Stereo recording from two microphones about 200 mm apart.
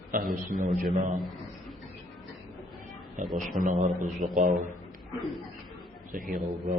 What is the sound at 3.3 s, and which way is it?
A man's voice, 40° right (ahead or behind).